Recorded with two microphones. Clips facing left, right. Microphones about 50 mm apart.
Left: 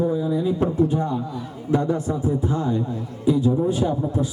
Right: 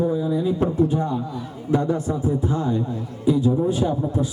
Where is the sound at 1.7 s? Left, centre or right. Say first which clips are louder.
Even; left.